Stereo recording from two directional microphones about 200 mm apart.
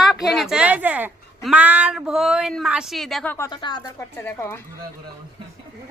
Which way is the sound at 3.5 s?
25° left (ahead or behind).